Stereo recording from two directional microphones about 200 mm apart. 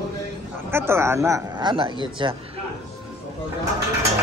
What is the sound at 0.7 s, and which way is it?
A man's voice, 10° right (ahead or behind).